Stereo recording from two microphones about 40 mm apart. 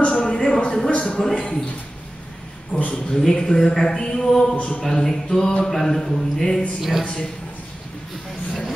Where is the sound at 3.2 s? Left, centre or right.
Centre.